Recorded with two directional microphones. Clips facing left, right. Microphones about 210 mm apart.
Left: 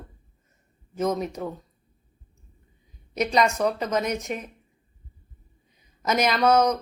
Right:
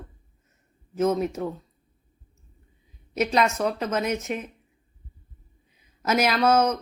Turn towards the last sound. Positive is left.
turn(degrees=-5)  # may be behind; listen again after turning